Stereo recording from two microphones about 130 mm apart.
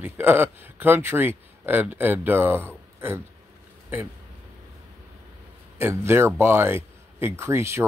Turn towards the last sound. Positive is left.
turn(degrees=-20)  # may be behind; listen again after turning